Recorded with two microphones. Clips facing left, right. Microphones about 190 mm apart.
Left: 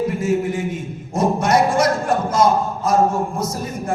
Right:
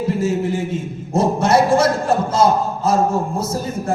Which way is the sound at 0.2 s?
25° right (ahead or behind).